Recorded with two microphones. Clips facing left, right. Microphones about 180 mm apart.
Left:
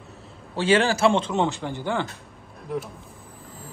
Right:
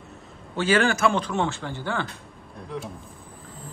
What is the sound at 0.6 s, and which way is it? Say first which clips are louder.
A man's voice: left 2 dB; 30° left (ahead or behind).